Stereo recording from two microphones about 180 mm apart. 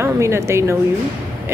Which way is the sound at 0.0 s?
15° right (ahead or behind).